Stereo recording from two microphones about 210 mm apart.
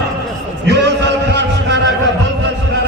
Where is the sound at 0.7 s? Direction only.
55° right (ahead or behind).